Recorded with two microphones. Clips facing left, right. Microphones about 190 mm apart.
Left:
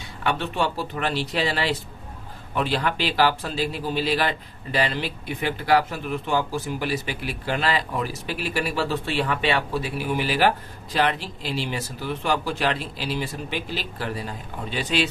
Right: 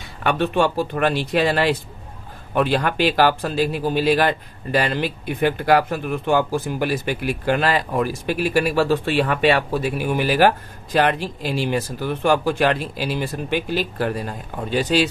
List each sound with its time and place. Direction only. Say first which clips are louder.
0.2 s speech: right 6 dB; 55° right (ahead or behind); by 15.0 s 40° right (ahead or behind)